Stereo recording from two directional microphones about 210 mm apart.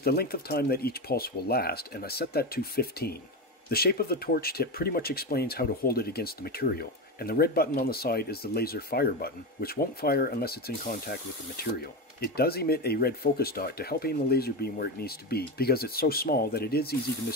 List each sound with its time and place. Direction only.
0.0 s speech: 45° left (ahead or behind)